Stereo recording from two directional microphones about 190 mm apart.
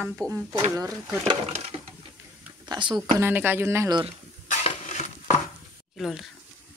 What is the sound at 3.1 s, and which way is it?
Speech, 10° right (ahead or behind).